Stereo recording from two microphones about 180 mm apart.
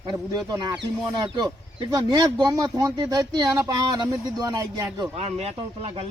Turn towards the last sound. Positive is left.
turn(degrees=-35)  # may be behind; listen again after turning